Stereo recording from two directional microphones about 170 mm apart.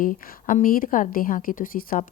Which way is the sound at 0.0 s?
55° left (ahead or behind).